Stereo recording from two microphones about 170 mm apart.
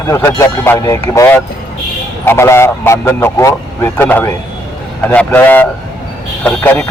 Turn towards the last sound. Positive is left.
turn(degrees=10)  # may be behind; listen again after turning